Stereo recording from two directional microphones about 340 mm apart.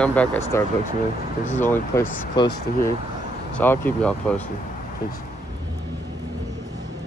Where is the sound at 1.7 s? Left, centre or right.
Centre.